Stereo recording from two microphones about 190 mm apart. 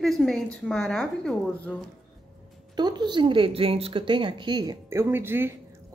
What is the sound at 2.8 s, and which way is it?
A woman's voice, 20° right (ahead or behind).